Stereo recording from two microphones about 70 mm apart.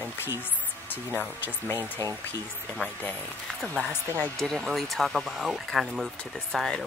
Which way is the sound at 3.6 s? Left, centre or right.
Centre.